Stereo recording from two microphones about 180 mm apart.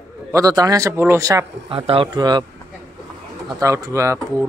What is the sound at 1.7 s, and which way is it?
Speech, 30° right (ahead or behind).